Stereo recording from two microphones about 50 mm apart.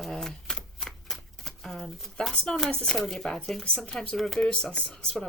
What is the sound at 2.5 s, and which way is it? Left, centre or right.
Speech, centre.